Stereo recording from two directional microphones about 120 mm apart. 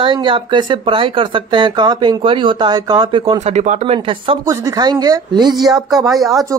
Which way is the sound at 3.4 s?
80° right.